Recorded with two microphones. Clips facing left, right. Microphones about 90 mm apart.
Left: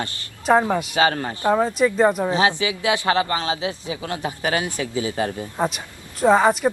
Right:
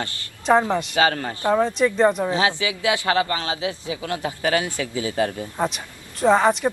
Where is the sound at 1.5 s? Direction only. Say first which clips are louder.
Right 1 dB; 10° left (ahead or behind).